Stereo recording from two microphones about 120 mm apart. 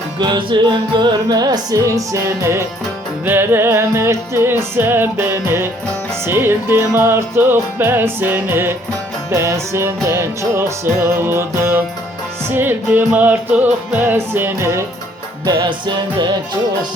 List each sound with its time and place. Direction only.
0.2 s music: 40° right (ahead or behind); by 14.8 s 20° right (ahead or behind)
15.4 s music: 40° right (ahead or behind)